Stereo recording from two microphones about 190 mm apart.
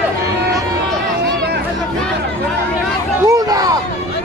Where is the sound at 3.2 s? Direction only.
20° right (ahead or behind).